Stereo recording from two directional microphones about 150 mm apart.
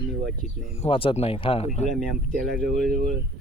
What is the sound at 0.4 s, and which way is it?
Speech, centre (ahead or behind).